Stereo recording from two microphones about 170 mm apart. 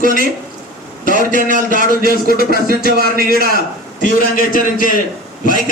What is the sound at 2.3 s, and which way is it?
Speech, 60° left (ahead or behind).